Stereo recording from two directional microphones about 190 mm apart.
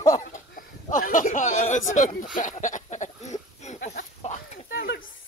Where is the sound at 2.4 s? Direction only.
40° left (ahead or behind).